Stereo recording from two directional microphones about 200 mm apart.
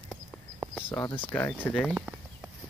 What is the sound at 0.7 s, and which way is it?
Speech, 10° left (ahead or behind).